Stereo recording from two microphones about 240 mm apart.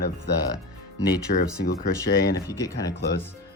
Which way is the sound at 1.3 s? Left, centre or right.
Left.